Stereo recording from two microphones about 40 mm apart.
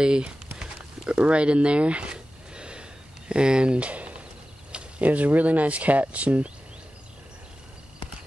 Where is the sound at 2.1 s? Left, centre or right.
Right.